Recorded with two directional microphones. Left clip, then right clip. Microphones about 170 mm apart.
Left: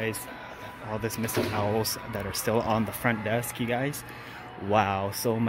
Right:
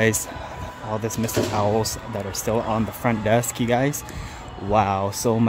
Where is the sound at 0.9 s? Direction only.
10° right (ahead or behind).